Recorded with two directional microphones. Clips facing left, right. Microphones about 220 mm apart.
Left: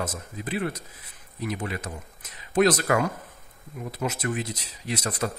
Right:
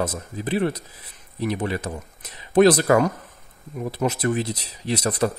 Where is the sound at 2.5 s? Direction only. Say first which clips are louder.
Right 6 dB; 35° right (ahead or behind).